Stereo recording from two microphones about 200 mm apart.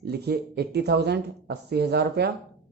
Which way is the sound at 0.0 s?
55° right (ahead or behind).